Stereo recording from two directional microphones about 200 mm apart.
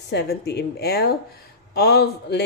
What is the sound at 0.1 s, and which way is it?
Speech, 55° left (ahead or behind).